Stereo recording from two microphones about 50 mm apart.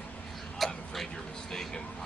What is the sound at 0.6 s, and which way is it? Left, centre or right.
Tick-tock, centre.